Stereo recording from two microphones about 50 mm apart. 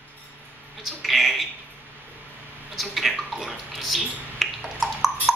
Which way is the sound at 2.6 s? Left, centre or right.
Centre.